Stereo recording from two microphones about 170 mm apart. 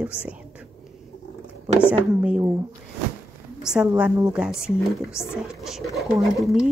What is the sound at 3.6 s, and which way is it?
A woman's voice, 5° right (ahead or behind).